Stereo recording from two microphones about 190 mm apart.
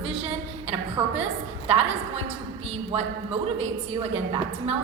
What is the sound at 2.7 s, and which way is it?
A woman's voice, 30° right (ahead or behind).